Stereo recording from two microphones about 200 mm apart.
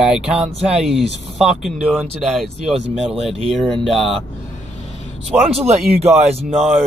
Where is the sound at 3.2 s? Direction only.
30° right (ahead or behind).